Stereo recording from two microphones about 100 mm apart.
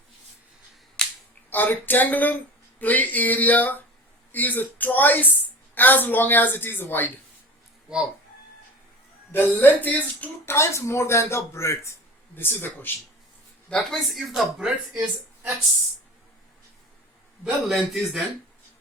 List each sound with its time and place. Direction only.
1.0 s finger snapping: 10° left (ahead or behind)
1.5 s speech: 20° left (ahead or behind)
9.3 s speech: 20° left (ahead or behind)
13.7 s speech: 5° left (ahead or behind)
17.4 s speech: centre (ahead or behind)